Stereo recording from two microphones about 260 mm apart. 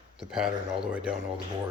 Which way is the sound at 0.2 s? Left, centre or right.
Centre.